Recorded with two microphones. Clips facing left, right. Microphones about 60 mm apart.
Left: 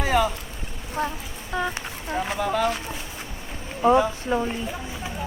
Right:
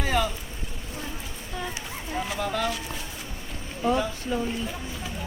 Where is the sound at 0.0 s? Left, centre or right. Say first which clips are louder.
Left 4 dB; centre.